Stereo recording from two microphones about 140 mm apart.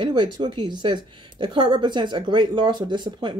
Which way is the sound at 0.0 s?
35° right (ahead or behind).